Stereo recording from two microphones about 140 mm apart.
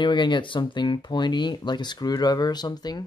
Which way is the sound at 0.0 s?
35° left (ahead or behind).